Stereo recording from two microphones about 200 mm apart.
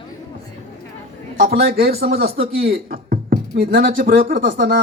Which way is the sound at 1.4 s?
50° right (ahead or behind).